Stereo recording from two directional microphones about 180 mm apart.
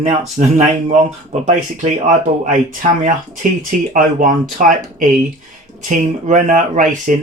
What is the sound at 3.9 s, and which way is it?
Speech, 50° right (ahead or behind).